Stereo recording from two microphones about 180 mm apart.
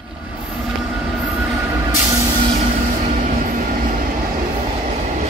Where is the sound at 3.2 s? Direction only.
45° right (ahead or behind).